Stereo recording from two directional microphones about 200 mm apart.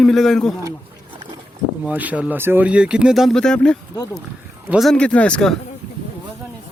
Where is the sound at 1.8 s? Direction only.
10° right (ahead or behind).